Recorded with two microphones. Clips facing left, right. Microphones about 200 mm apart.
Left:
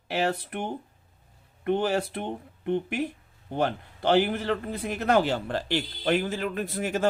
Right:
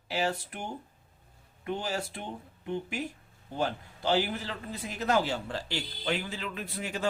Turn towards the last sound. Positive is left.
turn(degrees=50)  # may be behind; listen again after turning